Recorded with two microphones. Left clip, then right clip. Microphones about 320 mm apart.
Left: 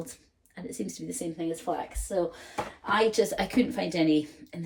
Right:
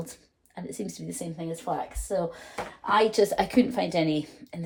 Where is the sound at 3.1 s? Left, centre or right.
Centre.